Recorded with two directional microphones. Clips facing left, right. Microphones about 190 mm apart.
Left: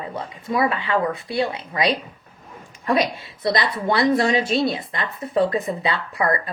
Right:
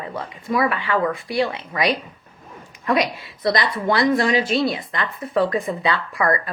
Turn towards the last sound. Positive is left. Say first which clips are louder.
# right 1 dB
turn(degrees=25)  # may be behind; listen again after turning